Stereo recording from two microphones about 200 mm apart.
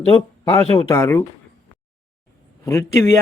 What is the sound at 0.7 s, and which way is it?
Speech, 20° left (ahead or behind).